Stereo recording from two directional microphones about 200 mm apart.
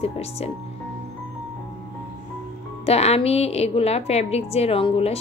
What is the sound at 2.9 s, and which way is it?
A woman's voice, 30° left (ahead or behind).